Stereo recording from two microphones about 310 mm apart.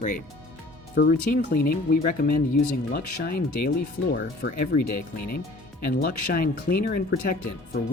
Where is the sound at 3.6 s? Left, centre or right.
Left.